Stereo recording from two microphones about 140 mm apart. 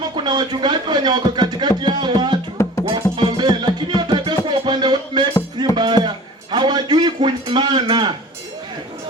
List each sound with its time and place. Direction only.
0.0 s speech: 30° right (ahead or behind)
2.8 s music: 30° right (ahead or behind)
6.5 s a sound: 30° right (ahead or behind)